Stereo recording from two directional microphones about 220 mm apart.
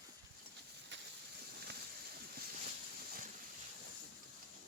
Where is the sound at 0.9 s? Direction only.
50° right (ahead or behind).